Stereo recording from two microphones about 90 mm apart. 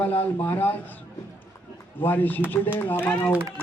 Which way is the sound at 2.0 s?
20° left (ahead or behind).